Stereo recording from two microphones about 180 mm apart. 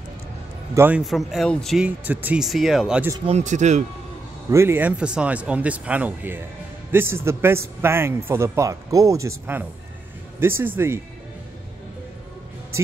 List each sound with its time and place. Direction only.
0.7 s speech: 10° right (ahead or behind)
3.3 s speech: 40° right (ahead or behind)
4.5 s a man's voice: 15° right (ahead or behind)